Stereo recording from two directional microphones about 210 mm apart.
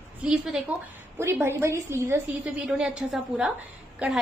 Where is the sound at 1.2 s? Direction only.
10° right (ahead or behind).